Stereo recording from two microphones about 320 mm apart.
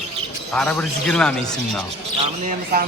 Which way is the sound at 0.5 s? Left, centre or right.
Centre.